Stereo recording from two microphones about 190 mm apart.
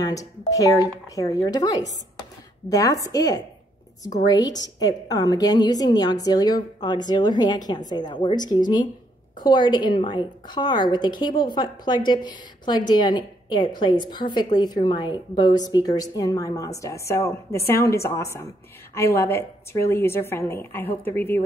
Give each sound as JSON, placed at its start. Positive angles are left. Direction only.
{"t": 0.0, "sound": "a woman's voice", "side_deg": 15}